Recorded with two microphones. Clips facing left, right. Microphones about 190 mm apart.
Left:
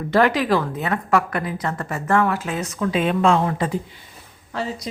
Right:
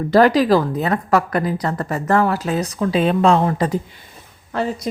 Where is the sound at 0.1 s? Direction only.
35° right (ahead or behind).